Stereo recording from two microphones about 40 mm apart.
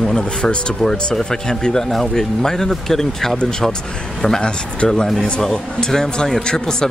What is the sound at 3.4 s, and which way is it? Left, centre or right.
Speech, centre.